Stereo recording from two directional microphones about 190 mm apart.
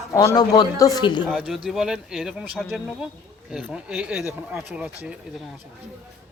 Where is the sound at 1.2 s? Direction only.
Centre (ahead or behind).